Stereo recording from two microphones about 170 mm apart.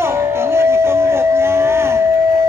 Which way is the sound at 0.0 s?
15° right (ahead or behind).